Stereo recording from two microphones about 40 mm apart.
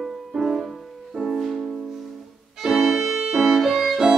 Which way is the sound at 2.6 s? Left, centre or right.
Centre.